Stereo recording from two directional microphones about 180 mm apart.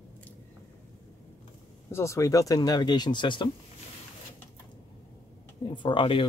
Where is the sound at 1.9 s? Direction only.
15° left (ahead or behind).